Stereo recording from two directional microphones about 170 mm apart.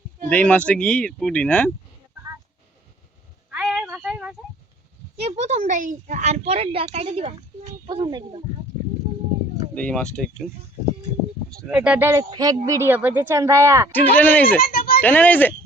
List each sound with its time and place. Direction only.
0.3 s speech: 10° left (ahead or behind)
3.5 s a sound: 5° right (ahead or behind)
5.2 s a woman's voice: 40° right (ahead or behind)
9.7 s speech: 5° left (ahead or behind)
11.6 s speech: 5° right (ahead or behind)
14.2 s speech: 10° left (ahead or behind)
14.6 s a sound: 60° left (ahead or behind)
15.0 s speech: 10° left (ahead or behind)